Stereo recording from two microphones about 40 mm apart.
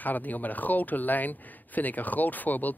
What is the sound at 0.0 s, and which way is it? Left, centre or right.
Speech, left.